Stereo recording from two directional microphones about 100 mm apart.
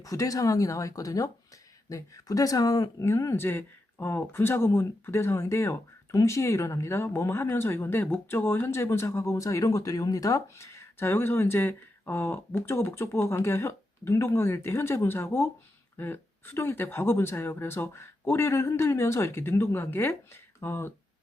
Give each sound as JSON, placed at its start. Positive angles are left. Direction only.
{"t": 0.0, "sound": "speech", "side_deg": 35}